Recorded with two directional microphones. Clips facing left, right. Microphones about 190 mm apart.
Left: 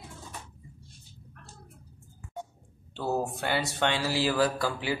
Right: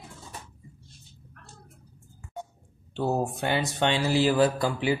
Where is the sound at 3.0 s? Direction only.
20° right (ahead or behind).